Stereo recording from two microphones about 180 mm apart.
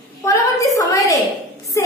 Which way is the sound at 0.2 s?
15° left (ahead or behind).